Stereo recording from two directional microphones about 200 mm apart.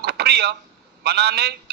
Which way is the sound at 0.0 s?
55° right (ahead or behind).